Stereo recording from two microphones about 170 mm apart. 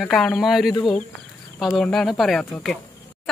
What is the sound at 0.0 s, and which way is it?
Speech, 5° left (ahead or behind).